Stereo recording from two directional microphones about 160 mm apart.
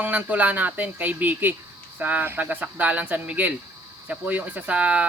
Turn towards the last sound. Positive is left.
turn(degrees=-10)  # may be behind; listen again after turning